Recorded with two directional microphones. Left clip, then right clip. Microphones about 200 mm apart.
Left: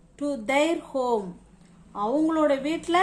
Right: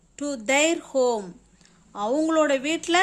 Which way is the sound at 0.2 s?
40° right (ahead or behind).